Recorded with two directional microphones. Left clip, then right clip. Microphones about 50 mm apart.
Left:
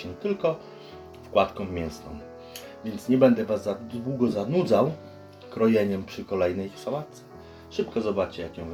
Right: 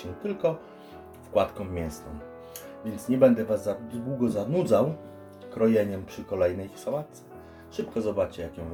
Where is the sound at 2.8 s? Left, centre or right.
Centre.